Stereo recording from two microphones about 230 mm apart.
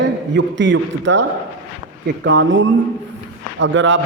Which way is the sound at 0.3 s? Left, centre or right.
Right.